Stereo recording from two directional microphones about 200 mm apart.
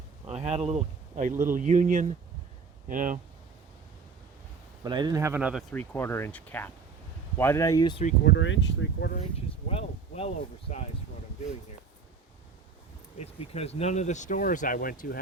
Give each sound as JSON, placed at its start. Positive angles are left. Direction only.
{"t": 0.3, "sound": "speech", "side_deg": -30}
{"t": 4.8, "sound": "speech", "side_deg": -20}
{"t": 5.7, "sound": "speech", "side_deg": 10}
{"t": 8.2, "sound": "speech", "side_deg": 60}
{"t": 9.6, "sound": "speech", "side_deg": 30}
{"t": 13.2, "sound": "speech", "side_deg": 30}